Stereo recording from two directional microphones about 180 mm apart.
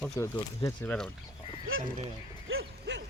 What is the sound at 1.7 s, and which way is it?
Speech, 90° right.